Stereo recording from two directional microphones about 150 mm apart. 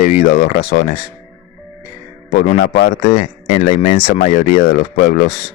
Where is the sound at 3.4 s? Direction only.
40° left (ahead or behind).